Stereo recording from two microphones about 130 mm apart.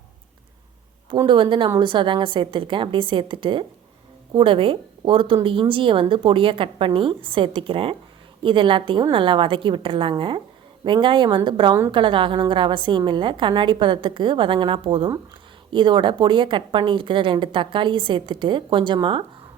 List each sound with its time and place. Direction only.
1.3 s a woman's voice: 40° right (ahead or behind)